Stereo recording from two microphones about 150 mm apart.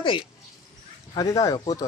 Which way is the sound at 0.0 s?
35° left (ahead or behind).